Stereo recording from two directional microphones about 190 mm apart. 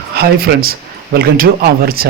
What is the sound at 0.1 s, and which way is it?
Speech, 55° right (ahead or behind).